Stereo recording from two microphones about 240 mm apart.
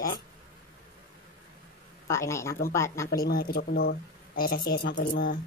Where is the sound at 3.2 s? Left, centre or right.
Left.